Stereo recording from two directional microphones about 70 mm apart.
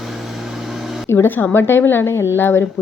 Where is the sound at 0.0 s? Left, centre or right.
Centre.